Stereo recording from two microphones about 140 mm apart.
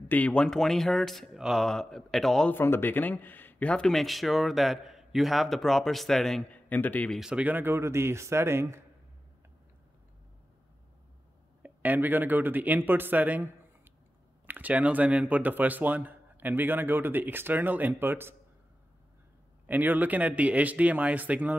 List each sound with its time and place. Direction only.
0.1 s speech: 10° left (ahead or behind)
2.5 s speech: 15° left (ahead or behind)
7.2 s speech: 5° right (ahead or behind)
11.6 s speech: 10° right (ahead or behind)
19.6 s speech: 10° right (ahead or behind)